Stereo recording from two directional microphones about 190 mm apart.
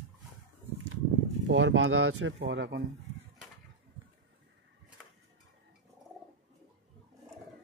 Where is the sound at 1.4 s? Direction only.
85° right.